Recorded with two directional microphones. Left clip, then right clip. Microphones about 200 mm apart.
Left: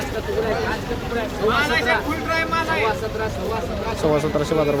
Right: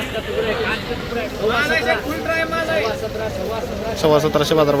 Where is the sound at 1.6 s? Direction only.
30° left (ahead or behind).